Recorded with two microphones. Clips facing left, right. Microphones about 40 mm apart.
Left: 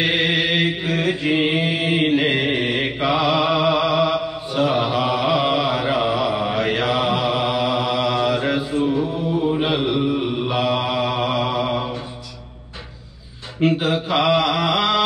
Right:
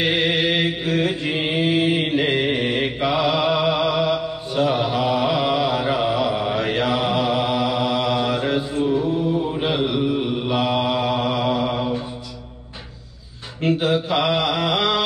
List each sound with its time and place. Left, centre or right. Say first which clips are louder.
0.0 s mantra: even; centre
13.7 s mantra: even; centre